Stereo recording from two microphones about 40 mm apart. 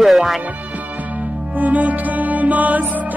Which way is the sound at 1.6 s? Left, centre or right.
Right.